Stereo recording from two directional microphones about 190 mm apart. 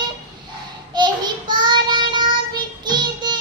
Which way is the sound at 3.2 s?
25° right (ahead or behind).